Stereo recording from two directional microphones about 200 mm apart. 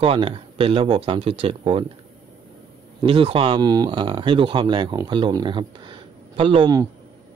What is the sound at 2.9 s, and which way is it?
Speech, 25° right (ahead or behind).